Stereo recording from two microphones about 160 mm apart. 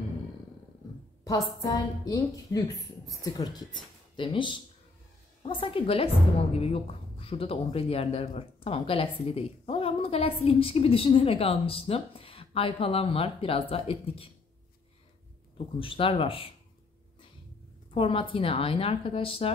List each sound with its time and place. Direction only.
1.2 s a woman's voice: 25° left (ahead or behind)
15.5 s a woman's voice: 35° left (ahead or behind)
17.9 s a woman's voice: 35° left (ahead or behind)